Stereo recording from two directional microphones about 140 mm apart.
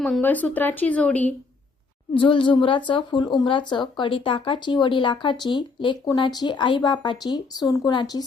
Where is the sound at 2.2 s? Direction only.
35° left (ahead or behind).